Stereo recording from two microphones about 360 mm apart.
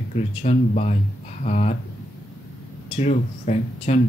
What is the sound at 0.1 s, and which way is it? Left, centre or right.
Speech, centre.